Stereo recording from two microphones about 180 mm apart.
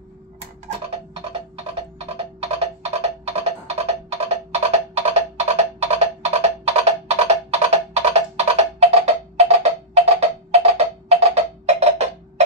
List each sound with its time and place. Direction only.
2.0 s music: 35° right (ahead or behind)